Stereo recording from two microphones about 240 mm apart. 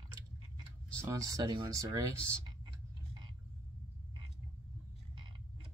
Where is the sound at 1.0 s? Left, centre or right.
Centre.